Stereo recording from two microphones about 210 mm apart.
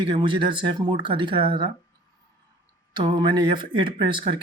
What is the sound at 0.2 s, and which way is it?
Speech, 25° right (ahead or behind).